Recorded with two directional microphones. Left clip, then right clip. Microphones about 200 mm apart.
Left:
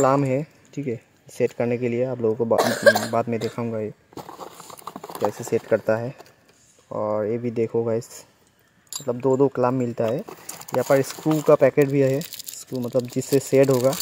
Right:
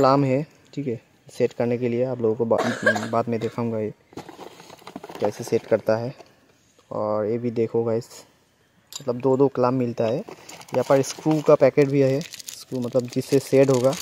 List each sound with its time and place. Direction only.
0.0 s speech: 10° right (ahead or behind)
2.5 s speech: 40° left (ahead or behind)
3.1 s speech: centre (ahead or behind)
8.0 s speech: 20° right (ahead or behind)
8.9 s speech: 5° right (ahead or behind)
10.5 s a sound: centre (ahead or behind)
11.1 s speech: centre (ahead or behind)